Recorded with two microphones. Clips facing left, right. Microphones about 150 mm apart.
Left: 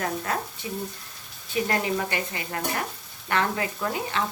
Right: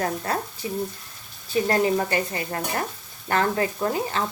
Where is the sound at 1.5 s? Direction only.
40° right (ahead or behind).